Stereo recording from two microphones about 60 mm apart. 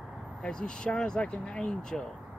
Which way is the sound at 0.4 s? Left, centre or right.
Centre.